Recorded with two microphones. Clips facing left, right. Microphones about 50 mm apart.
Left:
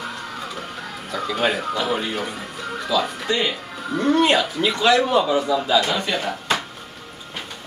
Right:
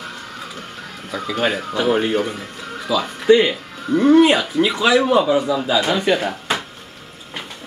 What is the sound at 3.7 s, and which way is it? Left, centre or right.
Speech, centre.